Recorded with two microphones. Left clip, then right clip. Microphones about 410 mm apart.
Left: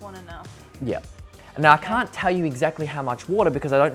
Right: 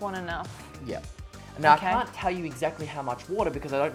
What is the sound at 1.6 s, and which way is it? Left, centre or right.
Speech, left.